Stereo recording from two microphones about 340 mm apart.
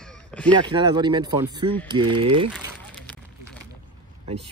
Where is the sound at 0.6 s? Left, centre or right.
Centre.